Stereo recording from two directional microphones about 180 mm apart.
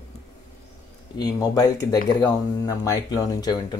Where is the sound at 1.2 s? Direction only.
20° left (ahead or behind).